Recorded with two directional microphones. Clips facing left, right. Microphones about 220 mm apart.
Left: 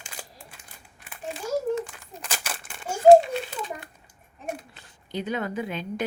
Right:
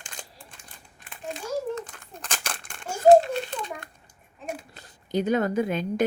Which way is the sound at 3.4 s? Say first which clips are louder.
Right 1 dB; 5° left (ahead or behind).